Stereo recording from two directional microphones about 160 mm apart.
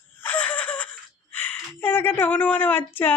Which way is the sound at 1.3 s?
10° left (ahead or behind).